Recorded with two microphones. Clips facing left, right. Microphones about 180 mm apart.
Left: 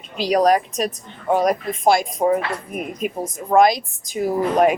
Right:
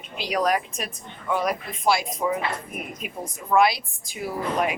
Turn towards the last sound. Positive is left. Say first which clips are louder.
# left 9 dB
turn(degrees=45)  # may be behind; listen again after turning